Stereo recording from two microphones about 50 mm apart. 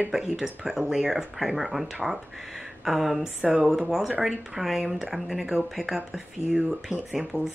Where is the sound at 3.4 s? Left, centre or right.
Centre.